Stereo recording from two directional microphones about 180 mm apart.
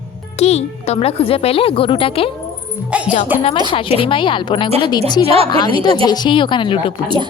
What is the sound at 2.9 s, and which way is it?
Speech, 5° right (ahead or behind).